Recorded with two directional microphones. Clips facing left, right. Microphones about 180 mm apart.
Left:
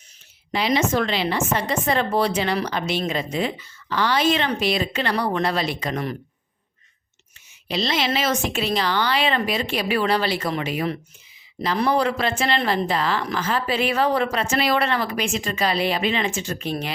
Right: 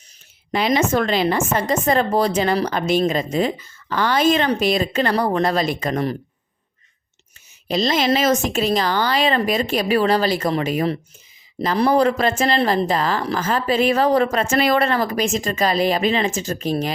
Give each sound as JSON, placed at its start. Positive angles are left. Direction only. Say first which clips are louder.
{"t": 0.5, "sound": "speech", "louder": "right 3 dB", "side_deg": -50}
{"t": 7.7, "sound": "speech", "louder": "right 5 dB", "side_deg": -45}